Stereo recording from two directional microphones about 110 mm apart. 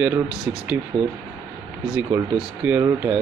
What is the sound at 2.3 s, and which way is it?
Speech, 10° right (ahead or behind).